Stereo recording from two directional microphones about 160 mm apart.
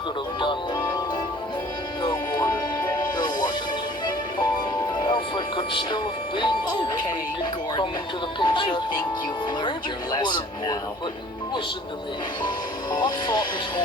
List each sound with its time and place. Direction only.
0.3 s music: 30° left (ahead or behind)
2.0 s music: 25° left (ahead or behind)
8.4 s speech: 30° left (ahead or behind)
12.9 s speech: 25° left (ahead or behind)